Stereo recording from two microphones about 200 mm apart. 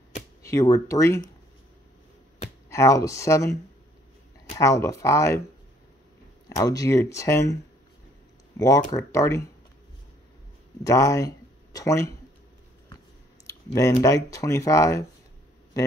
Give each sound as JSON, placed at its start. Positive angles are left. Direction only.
{"t": 0.4, "sound": "speech", "side_deg": 15}
{"t": 2.7, "sound": "speech", "side_deg": 15}
{"t": 4.6, "sound": "speech", "side_deg": 15}
{"t": 6.5, "sound": "speech", "side_deg": 15}
{"t": 8.5, "sound": "speech", "side_deg": 15}
{"t": 10.8, "sound": "speech", "side_deg": 15}
{"t": 13.5, "sound": "typing", "side_deg": 15}
{"t": 14.0, "sound": "speech", "side_deg": 15}